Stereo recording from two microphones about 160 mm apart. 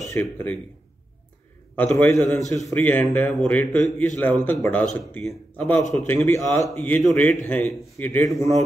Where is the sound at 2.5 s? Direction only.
20° left (ahead or behind).